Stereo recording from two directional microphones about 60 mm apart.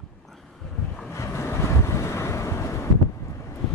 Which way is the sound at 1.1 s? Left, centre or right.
Left.